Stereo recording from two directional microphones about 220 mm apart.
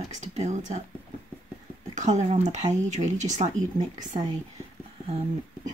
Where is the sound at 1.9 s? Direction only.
35° right (ahead or behind).